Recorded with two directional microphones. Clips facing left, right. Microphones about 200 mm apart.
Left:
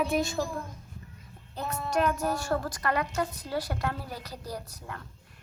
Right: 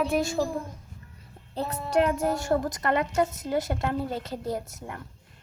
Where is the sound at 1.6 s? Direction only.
35° right (ahead or behind).